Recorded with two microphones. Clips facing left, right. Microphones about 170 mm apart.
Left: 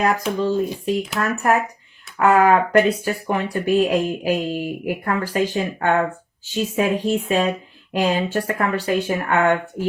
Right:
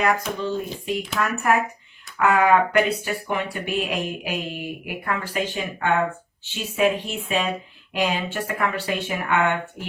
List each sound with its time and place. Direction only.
0.0 s speech: 35° left (ahead or behind)